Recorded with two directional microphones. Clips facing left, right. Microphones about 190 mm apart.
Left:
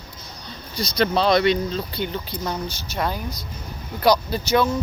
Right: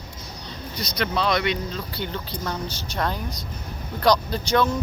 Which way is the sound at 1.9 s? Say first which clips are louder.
Left 3 dB; 15° left (ahead or behind).